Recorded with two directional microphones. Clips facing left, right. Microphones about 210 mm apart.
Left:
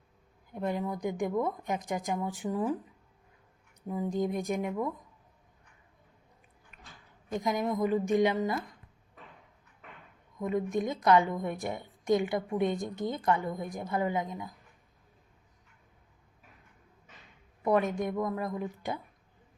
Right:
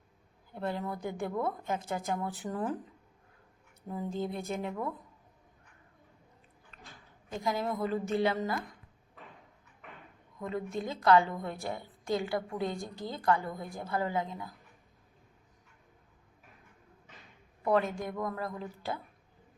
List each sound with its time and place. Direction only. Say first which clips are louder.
0.5 s speech: left 3 dB; 15° left (ahead or behind)
3.8 s speech: left 4 dB; 15° left (ahead or behind)
7.3 s speech: left 3 dB; 20° left (ahead or behind)
10.4 s a woman's voice: left 5 dB; 15° left (ahead or behind)
17.6 s a woman's voice: left 2 dB; 15° left (ahead or behind)